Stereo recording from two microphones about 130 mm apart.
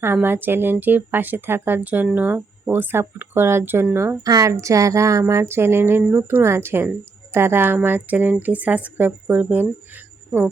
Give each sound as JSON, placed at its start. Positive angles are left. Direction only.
{"t": 0.0, "sound": "speech", "side_deg": -15}